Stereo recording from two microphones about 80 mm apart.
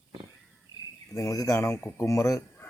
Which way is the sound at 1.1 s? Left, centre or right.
Left.